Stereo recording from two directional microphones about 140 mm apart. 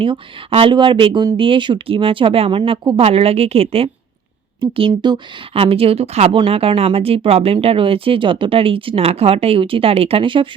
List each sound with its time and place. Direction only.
0.0 s speech: 40° right (ahead or behind)
5.5 s speech: 45° right (ahead or behind)